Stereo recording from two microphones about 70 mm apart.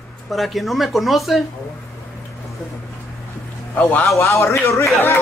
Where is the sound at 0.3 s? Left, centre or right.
Centre.